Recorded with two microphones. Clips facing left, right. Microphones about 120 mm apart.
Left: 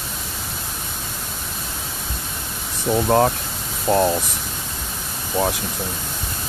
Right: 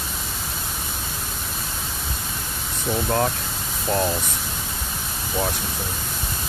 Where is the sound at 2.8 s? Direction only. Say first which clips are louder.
Left 6 dB; 25° left (ahead or behind).